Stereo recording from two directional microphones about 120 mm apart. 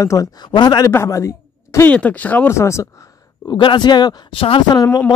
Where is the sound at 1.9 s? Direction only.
10° left (ahead or behind).